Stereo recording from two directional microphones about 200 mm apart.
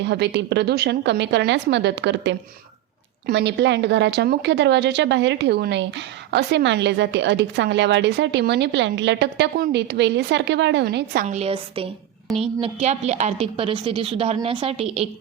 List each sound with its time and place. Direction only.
0.0 s a woman's voice: 60° right (ahead or behind); by 15.0 s 30° right (ahead or behind)